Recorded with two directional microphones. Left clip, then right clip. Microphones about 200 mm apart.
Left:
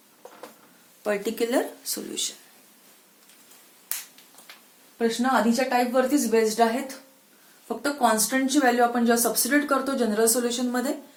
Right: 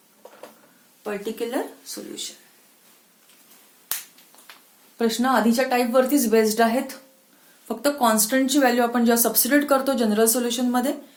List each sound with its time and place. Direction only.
1.0 s speech: 50° left (ahead or behind)
4.9 s speech: 55° right (ahead or behind)